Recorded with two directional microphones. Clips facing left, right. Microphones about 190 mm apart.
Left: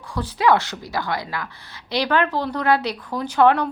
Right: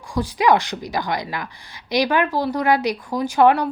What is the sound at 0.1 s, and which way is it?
Speech, 15° right (ahead or behind).